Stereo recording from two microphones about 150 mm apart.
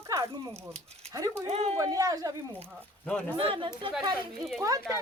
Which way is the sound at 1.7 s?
25° right (ahead or behind).